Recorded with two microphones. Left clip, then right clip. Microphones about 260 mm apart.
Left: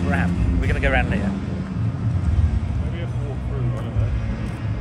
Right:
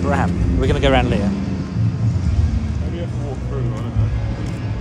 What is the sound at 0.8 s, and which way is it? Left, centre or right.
Speech, right.